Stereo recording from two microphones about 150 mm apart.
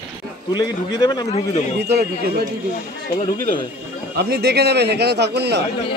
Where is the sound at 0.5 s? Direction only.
25° left (ahead or behind).